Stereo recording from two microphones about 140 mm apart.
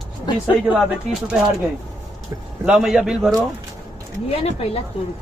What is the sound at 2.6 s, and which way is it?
Speech, 5° right (ahead or behind).